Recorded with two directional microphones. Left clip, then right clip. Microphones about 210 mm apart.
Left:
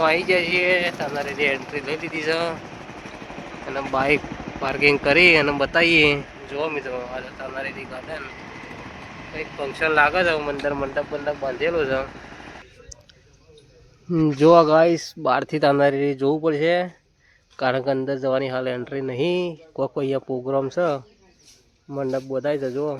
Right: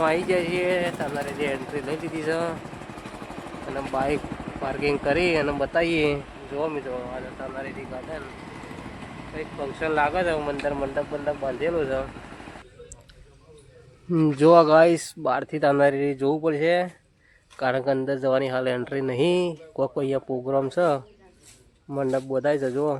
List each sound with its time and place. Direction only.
0.0 s speech: 20° left (ahead or behind)
3.7 s speech: 15° left (ahead or behind)
9.3 s speech: 25° left (ahead or behind)
14.3 s speech: 10° left (ahead or behind)
15.2 s speech: 20° left (ahead or behind); by 23.0 s centre (ahead or behind)